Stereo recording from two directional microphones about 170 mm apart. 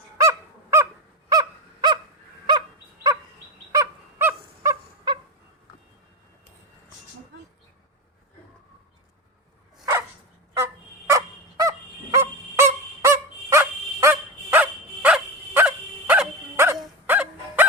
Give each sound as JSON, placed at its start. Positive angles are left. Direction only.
{"t": 0.2, "sound": "honk", "side_deg": -15}
{"t": 1.3, "sound": "a sound", "side_deg": -25}
{"t": 2.5, "sound": "dog", "side_deg": -25}
{"t": 3.7, "sound": "bird", "side_deg": -15}
{"t": 10.5, "sound": "fowl", "side_deg": -15}
{"t": 12.1, "sound": "dog", "side_deg": -15}
{"t": 17.1, "sound": "a sound", "side_deg": -10}